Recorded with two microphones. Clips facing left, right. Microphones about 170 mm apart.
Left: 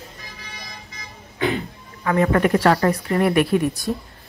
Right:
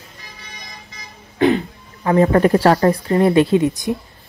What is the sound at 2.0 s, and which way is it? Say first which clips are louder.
Speech: right 5 dB; 30° right (ahead or behind).